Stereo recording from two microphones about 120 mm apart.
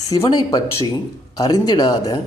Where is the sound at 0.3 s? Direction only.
35° left (ahead or behind).